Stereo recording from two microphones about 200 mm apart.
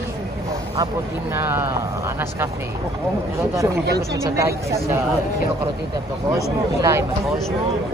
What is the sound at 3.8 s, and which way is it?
Speech, 55° right (ahead or behind).